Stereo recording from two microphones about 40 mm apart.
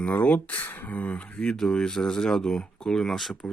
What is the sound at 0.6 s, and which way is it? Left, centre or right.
Speech, left.